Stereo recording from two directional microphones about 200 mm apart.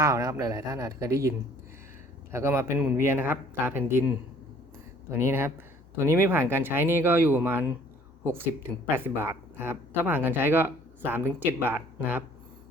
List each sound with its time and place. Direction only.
0.0 s speech: 20° right (ahead or behind)
2.3 s speech: 15° right (ahead or behind)
5.2 s speech: 10° right (ahead or behind)